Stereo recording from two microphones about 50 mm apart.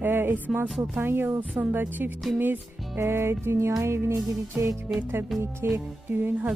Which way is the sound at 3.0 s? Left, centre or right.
Right.